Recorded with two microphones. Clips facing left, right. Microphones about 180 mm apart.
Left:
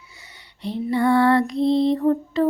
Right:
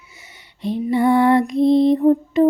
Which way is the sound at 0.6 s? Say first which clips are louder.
Right 3 dB; 15° right (ahead or behind).